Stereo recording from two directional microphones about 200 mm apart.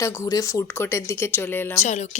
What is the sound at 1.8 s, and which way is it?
Speech, 35° left (ahead or behind).